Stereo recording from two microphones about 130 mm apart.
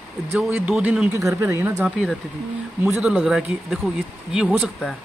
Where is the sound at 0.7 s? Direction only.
5° right (ahead or behind).